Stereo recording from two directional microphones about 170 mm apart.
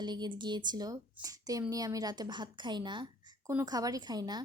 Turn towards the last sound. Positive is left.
turn(degrees=-25)  # may be behind; listen again after turning